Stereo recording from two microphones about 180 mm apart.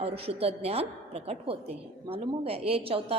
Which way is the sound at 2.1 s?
30° right (ahead or behind).